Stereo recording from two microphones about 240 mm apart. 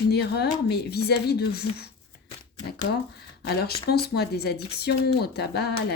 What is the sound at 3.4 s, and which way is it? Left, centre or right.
Speech, left.